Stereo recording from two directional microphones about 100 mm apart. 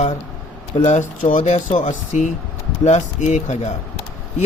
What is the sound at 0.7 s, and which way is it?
Speech, 80° left.